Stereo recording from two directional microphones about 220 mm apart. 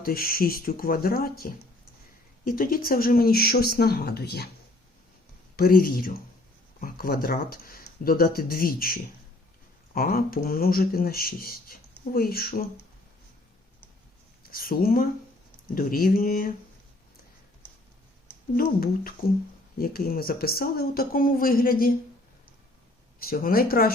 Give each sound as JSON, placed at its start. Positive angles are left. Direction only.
{"t": 0.0, "sound": "speech", "side_deg": 45}
{"t": 5.5, "sound": "speech", "side_deg": 40}
{"t": 14.4, "sound": "speech", "side_deg": 40}
{"t": 19.2, "sound": "speech", "side_deg": 40}
{"t": 23.2, "sound": "speech", "side_deg": 40}